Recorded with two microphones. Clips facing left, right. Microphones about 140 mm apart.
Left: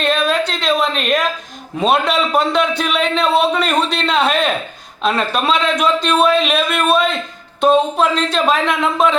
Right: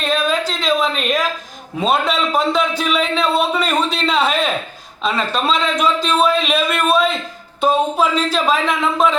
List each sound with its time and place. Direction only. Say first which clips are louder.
0.0 s a woman's voice: left 2 dB; centre (ahead or behind)